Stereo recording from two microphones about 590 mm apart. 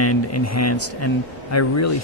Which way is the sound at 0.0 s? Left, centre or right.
Left.